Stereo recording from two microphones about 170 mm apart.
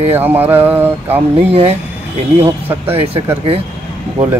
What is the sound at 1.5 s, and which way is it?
Speech, 35° right (ahead or behind).